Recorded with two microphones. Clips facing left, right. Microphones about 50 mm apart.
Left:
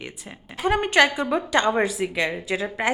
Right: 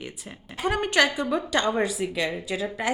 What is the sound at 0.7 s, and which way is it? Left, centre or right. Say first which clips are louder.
A woman's voice: left 4 dB; centre.